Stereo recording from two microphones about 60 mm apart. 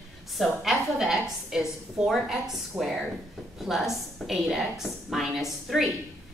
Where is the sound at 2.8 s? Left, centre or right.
Right.